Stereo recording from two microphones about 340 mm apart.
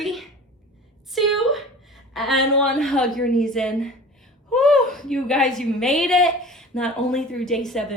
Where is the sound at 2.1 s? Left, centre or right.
Centre.